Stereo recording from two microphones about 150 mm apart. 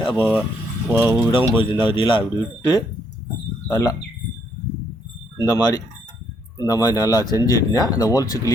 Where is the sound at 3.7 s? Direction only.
20° left (ahead or behind).